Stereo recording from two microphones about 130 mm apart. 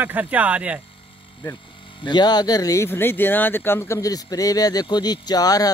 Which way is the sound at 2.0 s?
35° left (ahead or behind).